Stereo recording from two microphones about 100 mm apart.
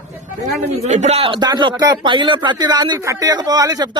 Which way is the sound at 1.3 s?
45° right (ahead or behind).